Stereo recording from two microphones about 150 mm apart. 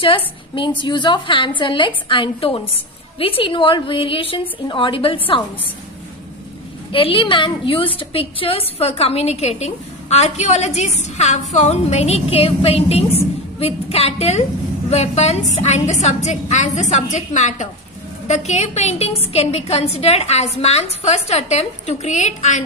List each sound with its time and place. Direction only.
0.0 s a woman's voice: 35° left (ahead or behind)
6.9 s a woman's voice: 35° left (ahead or behind); by 22.6 s 50° left (ahead or behind)